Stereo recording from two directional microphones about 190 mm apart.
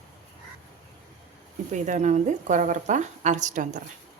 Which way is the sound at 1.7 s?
40° right (ahead or behind).